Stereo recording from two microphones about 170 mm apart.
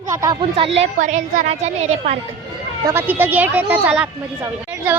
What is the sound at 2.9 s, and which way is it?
A woman's voice, 10° right (ahead or behind).